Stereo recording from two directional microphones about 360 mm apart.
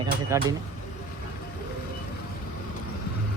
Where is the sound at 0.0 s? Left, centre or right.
Centre.